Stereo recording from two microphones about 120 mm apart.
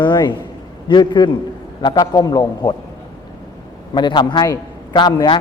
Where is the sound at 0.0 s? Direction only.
40° left (ahead or behind).